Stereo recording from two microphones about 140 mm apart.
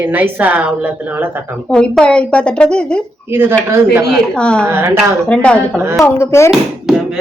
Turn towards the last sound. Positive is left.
turn(degrees=0)  # may be behind; listen again after turning